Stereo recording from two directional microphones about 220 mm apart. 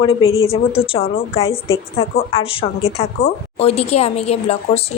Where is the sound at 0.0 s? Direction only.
25° left (ahead or behind).